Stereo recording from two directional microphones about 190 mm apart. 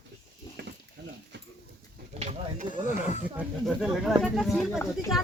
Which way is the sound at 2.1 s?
35° right (ahead or behind).